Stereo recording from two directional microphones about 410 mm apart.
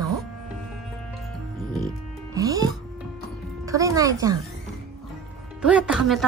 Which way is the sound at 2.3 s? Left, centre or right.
Centre.